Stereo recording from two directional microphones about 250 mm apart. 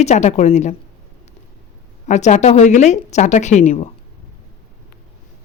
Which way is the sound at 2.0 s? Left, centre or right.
Left.